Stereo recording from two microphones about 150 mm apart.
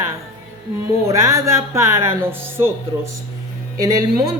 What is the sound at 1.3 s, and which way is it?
A woman's voice, 20° right (ahead or behind).